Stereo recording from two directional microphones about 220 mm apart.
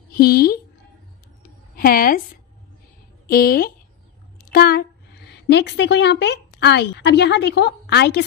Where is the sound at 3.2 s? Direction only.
45° left (ahead or behind).